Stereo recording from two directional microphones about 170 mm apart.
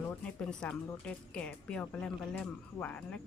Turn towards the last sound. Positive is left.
turn(degrees=10)  # may be behind; listen again after turning